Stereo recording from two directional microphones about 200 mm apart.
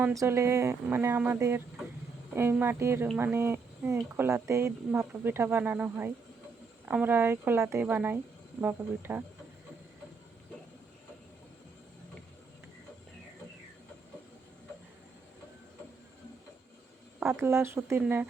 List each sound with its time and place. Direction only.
0.0 s speech: 15° right (ahead or behind)
17.2 s speech: 15° right (ahead or behind)